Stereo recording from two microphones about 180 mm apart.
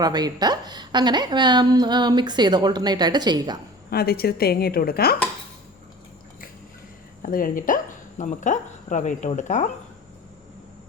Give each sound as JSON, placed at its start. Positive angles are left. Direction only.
{"t": 0.0, "sound": "a woman's voice", "side_deg": -20}
{"t": 3.8, "sound": "a woman's voice", "side_deg": 60}
{"t": 7.2, "sound": "speech", "side_deg": 50}